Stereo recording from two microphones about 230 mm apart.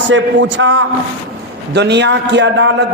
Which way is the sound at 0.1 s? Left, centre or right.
Right.